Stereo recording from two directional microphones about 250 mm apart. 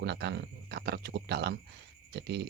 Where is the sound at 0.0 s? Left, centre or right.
Right.